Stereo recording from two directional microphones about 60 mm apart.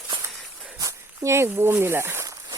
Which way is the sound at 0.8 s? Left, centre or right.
Right.